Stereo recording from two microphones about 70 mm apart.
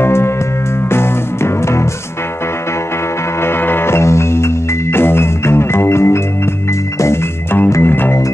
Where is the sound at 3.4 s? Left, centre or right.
Left.